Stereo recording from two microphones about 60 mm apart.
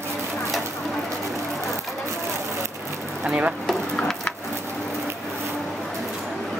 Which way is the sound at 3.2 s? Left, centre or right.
Centre.